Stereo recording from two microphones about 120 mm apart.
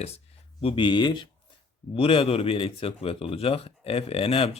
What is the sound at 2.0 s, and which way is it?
Speech, 50° left (ahead or behind).